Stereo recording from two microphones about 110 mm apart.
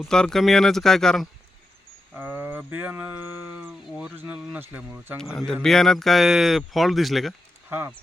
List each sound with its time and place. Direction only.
0.1 s speech: 5° left (ahead or behind)
2.1 s speech: 20° right (ahead or behind)
5.6 s speech: 5° left (ahead or behind)
7.7 s speech: 20° right (ahead or behind)